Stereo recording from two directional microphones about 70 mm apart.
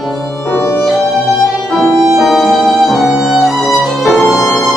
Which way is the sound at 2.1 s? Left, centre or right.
Centre.